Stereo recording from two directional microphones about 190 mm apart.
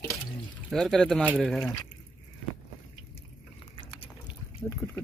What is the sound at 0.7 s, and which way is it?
Speech, centre (ahead or behind).